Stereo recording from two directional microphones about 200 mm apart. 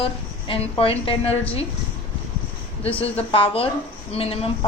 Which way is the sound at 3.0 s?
25° left (ahead or behind).